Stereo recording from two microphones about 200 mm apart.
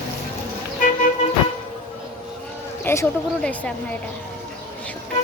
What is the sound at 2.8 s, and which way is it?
Speech, 10° left (ahead or behind).